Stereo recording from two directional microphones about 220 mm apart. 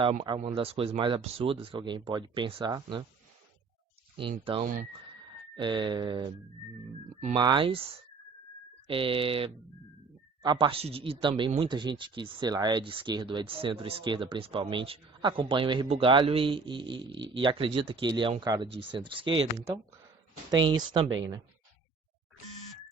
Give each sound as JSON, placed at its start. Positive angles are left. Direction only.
{"t": 0.0, "sound": "speech", "side_deg": -25}
{"t": 4.2, "sound": "speech", "side_deg": -25}
{"t": 4.6, "sound": "speech", "side_deg": -40}
{"t": 5.5, "sound": "speech", "side_deg": -20}
{"t": 7.3, "sound": "speech", "side_deg": -20}
{"t": 8.9, "sound": "speech", "side_deg": -25}